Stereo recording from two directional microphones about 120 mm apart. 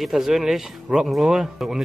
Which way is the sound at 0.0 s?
Centre (ahead or behind).